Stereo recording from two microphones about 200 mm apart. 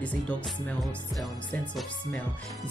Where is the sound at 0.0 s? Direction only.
5° left (ahead or behind).